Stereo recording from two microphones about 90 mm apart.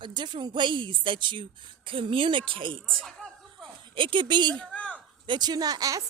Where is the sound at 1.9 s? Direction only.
80° right.